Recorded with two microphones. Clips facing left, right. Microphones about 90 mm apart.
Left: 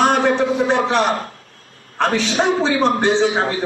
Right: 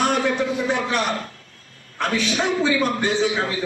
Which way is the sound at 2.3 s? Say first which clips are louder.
Left 4 dB; 35° left (ahead or behind).